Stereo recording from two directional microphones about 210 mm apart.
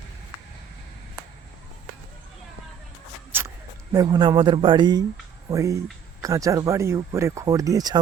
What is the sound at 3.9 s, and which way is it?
Speech, 20° right (ahead or behind).